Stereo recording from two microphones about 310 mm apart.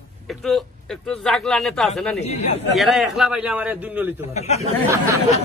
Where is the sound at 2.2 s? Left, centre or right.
Left.